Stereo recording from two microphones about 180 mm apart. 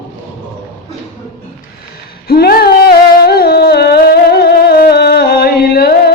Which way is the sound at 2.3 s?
55° left (ahead or behind).